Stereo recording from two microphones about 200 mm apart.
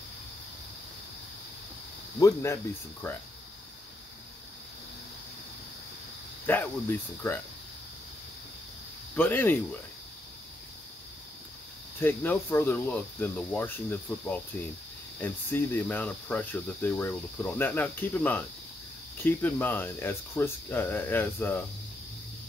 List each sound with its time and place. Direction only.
2.1 s speech: 15° left (ahead or behind)
6.4 s speech: 10° left (ahead or behind)
9.1 s speech: 10° left (ahead or behind)
12.0 s speech: 10° left (ahead or behind)